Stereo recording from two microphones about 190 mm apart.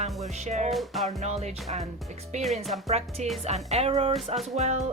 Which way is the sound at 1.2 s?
35° right (ahead or behind).